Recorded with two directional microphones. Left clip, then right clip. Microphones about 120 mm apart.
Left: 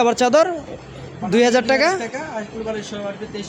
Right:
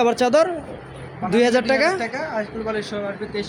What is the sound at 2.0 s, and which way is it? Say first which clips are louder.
Speech: right 2 dB; 5° right (ahead or behind).